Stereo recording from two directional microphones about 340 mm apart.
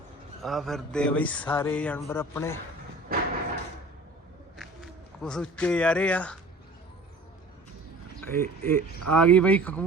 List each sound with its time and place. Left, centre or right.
0.4 s speech: centre
1.5 s a sound: centre
3.1 s thump: right
5.2 s speech: centre
8.3 s speech: centre